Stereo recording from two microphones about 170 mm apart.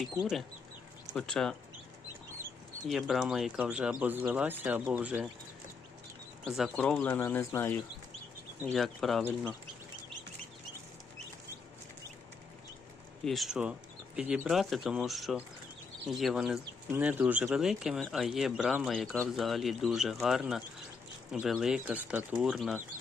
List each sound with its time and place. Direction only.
0.0 s speech: centre (ahead or behind)
2.9 s speech: centre (ahead or behind)
6.4 s speech: 5° left (ahead or behind)
8.7 s speech: centre (ahead or behind)
13.2 s speech: centre (ahead or behind)